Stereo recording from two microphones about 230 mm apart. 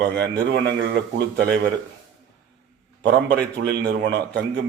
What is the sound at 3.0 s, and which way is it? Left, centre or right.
A man's voice, right.